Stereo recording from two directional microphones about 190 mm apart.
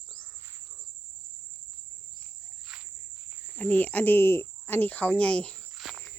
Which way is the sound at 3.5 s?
10° left (ahead or behind).